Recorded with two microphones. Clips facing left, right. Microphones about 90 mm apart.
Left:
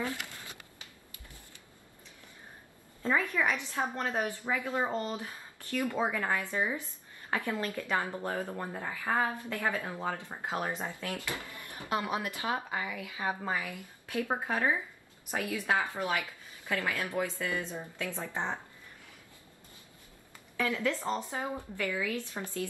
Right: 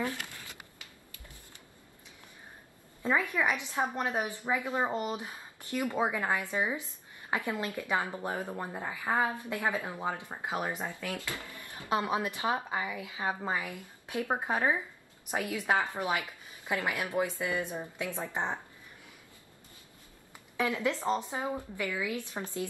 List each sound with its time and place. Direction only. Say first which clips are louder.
3.0 s a woman's voice: even; 15° right (ahead or behind)
11.9 s a woman's voice: right 3 dB; 20° right (ahead or behind)
20.3 s a woman's voice: right 1 dB; 20° right (ahead or behind)